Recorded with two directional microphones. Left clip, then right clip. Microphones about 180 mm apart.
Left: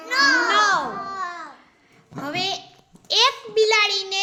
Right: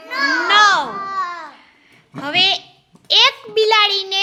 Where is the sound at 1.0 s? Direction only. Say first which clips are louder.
Right 6 dB; 70° right (ahead or behind).